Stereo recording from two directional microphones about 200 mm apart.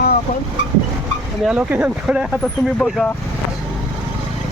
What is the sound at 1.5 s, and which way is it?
Speech, 5° right (ahead or behind).